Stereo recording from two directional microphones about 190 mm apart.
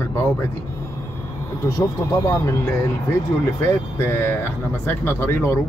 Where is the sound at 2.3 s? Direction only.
15° left (ahead or behind).